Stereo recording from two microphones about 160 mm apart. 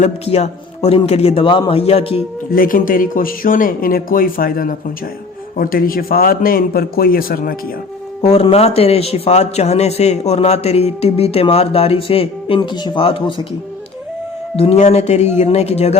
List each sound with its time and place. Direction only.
0.0 s speech: 45° left (ahead or behind)
2.5 s speech: 60° left (ahead or behind)
8.2 s speech: 40° left (ahead or behind)
14.5 s speech: 40° left (ahead or behind)